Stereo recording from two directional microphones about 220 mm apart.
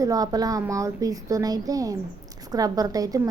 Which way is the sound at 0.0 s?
15° right (ahead or behind).